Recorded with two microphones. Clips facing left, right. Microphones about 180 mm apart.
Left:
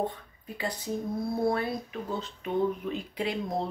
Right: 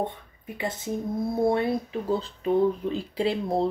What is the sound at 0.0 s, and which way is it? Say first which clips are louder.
Speech: right 1 dB; 25° right (ahead or behind).